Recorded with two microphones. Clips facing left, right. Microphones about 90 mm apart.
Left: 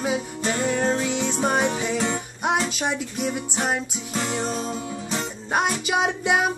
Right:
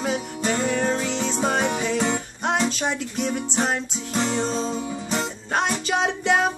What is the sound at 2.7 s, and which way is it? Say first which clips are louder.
Music: right 1 dB; 10° left (ahead or behind).